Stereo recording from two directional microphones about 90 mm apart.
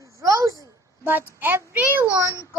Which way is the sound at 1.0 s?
20° right (ahead or behind).